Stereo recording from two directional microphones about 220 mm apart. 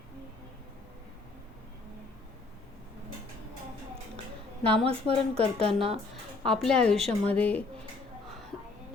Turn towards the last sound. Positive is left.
turn(degrees=5)  # may be behind; listen again after turning